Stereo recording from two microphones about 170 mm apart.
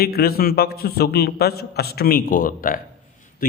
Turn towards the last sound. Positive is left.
turn(degrees=55)  # may be behind; listen again after turning